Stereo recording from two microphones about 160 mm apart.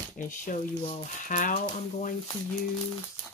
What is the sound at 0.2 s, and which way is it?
Speech, 55° left (ahead or behind).